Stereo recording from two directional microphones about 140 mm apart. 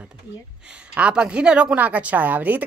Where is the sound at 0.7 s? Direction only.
10° right (ahead or behind).